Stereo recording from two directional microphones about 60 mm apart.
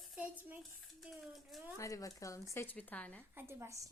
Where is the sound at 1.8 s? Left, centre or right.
Left.